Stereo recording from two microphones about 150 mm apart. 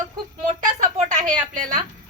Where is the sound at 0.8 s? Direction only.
55° right (ahead or behind).